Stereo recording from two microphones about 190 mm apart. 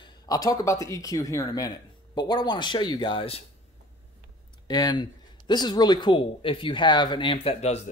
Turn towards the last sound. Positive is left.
turn(degrees=35)  # may be behind; listen again after turning